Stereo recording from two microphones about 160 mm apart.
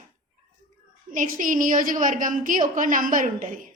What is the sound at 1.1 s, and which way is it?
A woman's voice, 55° right (ahead or behind).